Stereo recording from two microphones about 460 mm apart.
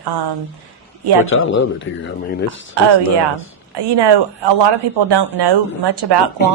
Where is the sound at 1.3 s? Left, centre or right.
Left.